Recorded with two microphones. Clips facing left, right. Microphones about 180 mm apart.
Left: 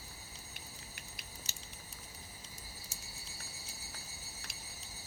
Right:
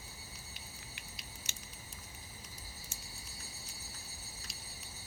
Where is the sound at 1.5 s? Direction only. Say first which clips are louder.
Even; 35° left (ahead or behind).